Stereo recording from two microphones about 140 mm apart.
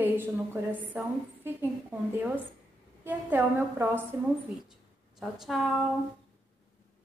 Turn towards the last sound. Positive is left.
turn(degrees=0)  # may be behind; listen again after turning